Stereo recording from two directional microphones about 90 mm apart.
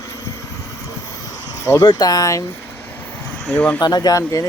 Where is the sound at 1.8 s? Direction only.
50° left (ahead or behind).